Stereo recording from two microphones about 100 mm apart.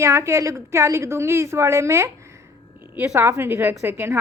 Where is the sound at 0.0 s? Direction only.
30° right (ahead or behind).